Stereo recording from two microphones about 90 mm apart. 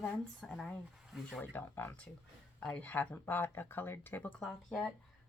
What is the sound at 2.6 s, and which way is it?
Speech, 15° left (ahead or behind).